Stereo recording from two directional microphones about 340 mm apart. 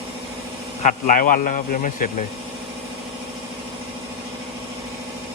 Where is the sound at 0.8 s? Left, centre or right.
Left.